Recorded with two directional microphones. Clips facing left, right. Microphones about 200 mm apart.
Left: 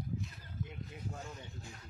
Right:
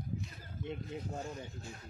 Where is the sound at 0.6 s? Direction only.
30° right (ahead or behind).